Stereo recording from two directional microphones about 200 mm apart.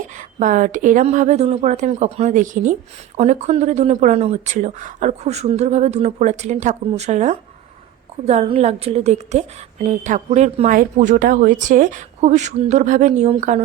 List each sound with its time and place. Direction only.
0.2 s a woman's voice: 40° right (ahead or behind)